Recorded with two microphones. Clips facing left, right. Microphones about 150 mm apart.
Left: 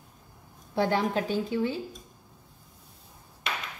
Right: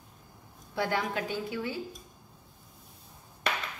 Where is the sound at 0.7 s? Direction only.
30° left (ahead or behind).